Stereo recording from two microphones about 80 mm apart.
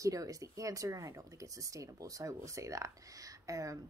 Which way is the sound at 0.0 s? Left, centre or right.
Right.